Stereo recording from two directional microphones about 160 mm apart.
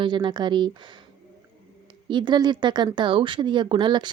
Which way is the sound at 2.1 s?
30° right (ahead or behind).